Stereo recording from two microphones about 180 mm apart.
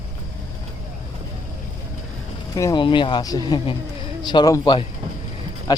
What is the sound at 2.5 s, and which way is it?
Speech, 20° left (ahead or behind).